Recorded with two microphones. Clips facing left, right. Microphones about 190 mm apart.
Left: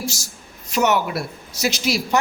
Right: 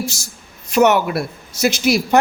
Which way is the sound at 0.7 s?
55° right (ahead or behind).